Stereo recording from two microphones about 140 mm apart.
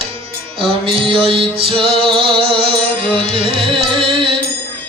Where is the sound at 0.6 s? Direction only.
40° right (ahead or behind).